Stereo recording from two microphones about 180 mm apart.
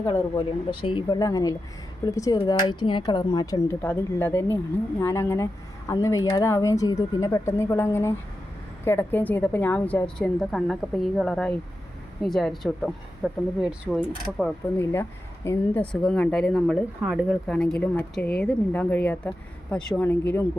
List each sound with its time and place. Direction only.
0.1 s a woman's voice: 30° left (ahead or behind); by 17.3 s 5° right (ahead or behind)
17.5 s speech: 5° left (ahead or behind)